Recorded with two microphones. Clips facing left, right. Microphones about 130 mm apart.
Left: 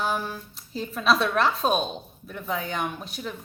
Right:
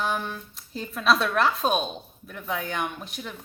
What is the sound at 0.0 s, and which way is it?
Speech, 5° left (ahead or behind).